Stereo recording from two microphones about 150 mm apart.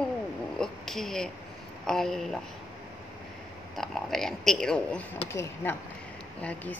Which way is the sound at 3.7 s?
Centre (ahead or behind).